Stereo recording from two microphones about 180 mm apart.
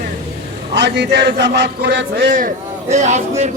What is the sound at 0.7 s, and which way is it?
A man's voice, 70° right (ahead or behind).